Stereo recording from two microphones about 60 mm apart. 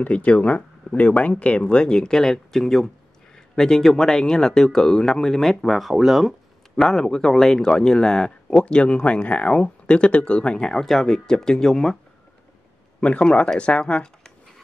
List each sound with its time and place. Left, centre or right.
0.0 s speech: left
13.0 s speech: centre